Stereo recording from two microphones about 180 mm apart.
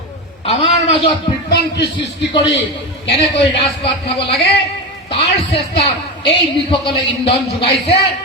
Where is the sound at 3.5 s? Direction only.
30° left (ahead or behind).